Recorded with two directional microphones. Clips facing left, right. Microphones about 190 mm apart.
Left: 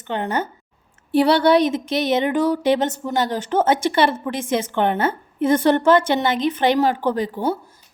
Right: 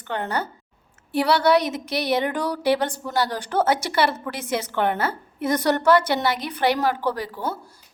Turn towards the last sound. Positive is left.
turn(degrees=20)  # may be behind; listen again after turning